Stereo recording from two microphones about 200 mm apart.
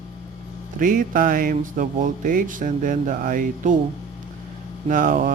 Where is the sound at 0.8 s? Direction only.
45° right (ahead or behind).